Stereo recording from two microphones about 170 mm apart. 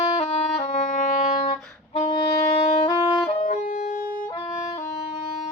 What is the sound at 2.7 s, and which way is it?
Saxophone, 30° left (ahead or behind).